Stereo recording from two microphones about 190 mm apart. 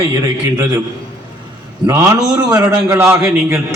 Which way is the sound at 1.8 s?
15° right (ahead or behind).